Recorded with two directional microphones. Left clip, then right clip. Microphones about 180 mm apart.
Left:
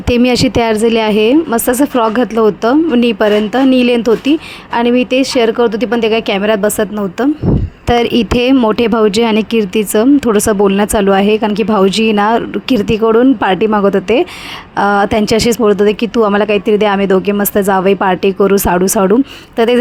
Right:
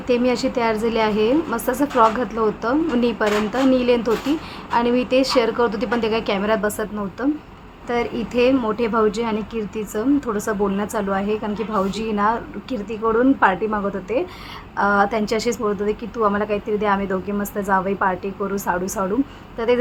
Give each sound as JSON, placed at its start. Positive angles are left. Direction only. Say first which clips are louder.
{"t": 0.1, "sound": "a woman's voice", "louder": "left 8 dB", "side_deg": 50}
{"t": 7.9, "sound": "speech", "louder": "left 12 dB", "side_deg": 55}